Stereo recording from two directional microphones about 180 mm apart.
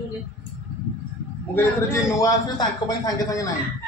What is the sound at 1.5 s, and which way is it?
A man's voice, 15° left (ahead or behind).